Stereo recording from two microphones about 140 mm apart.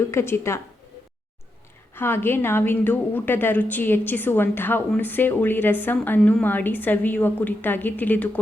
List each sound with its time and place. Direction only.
0.0 s a woman's voice: 20° left (ahead or behind)
2.0 s a woman's voice: 15° left (ahead or behind)